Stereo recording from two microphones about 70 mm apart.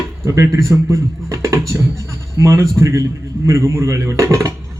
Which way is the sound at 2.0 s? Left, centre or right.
Left.